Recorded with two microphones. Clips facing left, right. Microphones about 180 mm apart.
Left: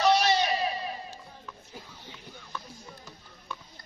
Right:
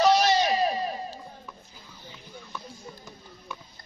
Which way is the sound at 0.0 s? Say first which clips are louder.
Right 3 dB; 40° right (ahead or behind).